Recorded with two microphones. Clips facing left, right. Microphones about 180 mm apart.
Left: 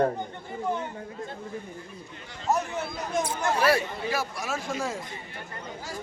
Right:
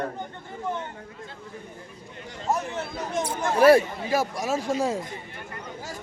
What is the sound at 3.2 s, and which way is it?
Speech, 55° right (ahead or behind).